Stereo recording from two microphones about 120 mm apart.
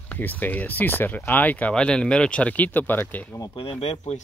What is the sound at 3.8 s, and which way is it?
Speech, 60° left (ahead or behind).